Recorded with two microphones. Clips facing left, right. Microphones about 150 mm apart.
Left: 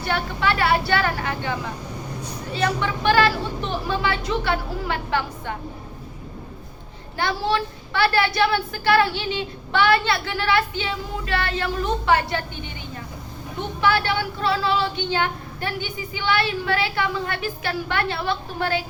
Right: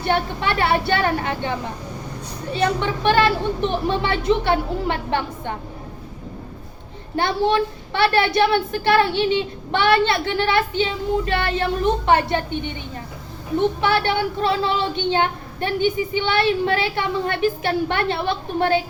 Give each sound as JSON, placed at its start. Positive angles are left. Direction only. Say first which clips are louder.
{"t": 0.0, "sound": "speech", "louder": "right 2 dB", "side_deg": -20}
{"t": 2.6, "sound": "speech", "louder": "right 3 dB", "side_deg": -25}
{"t": 7.2, "sound": "speech", "louder": "right 4 dB", "side_deg": -20}
{"t": 13.8, "sound": "speech", "louder": "right 2 dB", "side_deg": -20}